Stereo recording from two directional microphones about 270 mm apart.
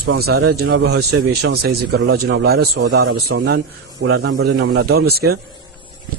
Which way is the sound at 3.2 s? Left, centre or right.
Right.